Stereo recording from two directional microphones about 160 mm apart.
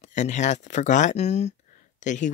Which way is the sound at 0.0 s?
50° left (ahead or behind).